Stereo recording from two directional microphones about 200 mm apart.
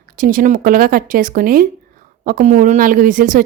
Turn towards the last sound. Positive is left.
turn(degrees=-40)  # may be behind; listen again after turning